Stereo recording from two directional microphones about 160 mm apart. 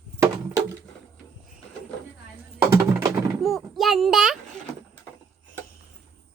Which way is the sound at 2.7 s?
20° right (ahead or behind).